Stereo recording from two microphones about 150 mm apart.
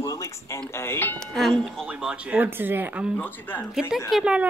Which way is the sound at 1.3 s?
5° left (ahead or behind).